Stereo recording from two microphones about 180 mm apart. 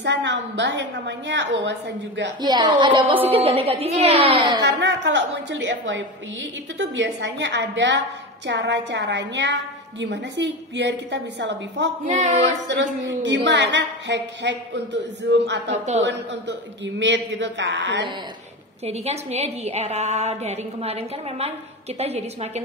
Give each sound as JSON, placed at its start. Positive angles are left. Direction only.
{"t": 0.0, "sound": "a woman's voice", "side_deg": -75}
{"t": 2.4, "sound": "a woman's voice", "side_deg": -25}
{"t": 4.6, "sound": "a woman's voice", "side_deg": -80}
{"t": 12.1, "sound": "a woman's voice", "side_deg": -40}
{"t": 13.2, "sound": "a woman's voice", "side_deg": -75}
{"t": 15.7, "sound": "a woman's voice", "side_deg": -40}
{"t": 16.0, "sound": "a woman's voice", "side_deg": -75}
{"t": 18.9, "sound": "a woman's voice", "side_deg": -35}